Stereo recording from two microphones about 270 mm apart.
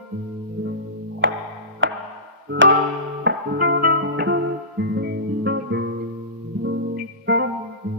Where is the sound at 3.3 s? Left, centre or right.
Right.